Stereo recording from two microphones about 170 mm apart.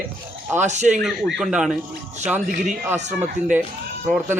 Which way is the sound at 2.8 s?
10° right (ahead or behind).